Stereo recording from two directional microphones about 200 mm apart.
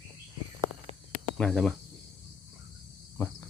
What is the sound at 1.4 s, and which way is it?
Speech, 5° left (ahead or behind).